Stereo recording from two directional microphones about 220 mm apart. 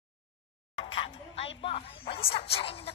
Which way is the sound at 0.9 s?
25° left (ahead or behind).